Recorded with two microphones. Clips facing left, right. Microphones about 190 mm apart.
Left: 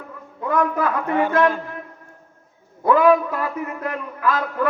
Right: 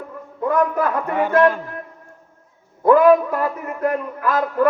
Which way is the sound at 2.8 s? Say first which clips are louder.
Right 3 dB; 50° right (ahead or behind).